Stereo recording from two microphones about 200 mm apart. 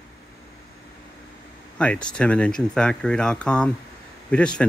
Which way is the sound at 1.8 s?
5° left (ahead or behind).